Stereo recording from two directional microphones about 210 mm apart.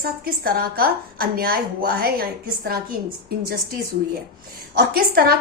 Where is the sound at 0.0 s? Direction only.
45° right (ahead or behind).